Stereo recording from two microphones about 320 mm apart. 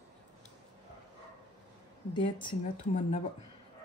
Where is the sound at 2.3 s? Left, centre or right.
Centre.